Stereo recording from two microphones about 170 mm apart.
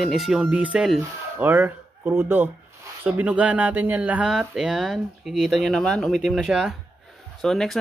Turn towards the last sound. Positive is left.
turn(degrees=0)  # may be behind; listen again after turning